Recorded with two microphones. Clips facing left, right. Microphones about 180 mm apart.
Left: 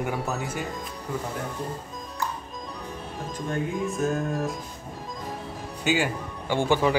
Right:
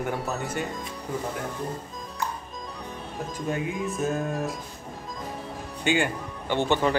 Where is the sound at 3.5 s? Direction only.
Centre (ahead or behind).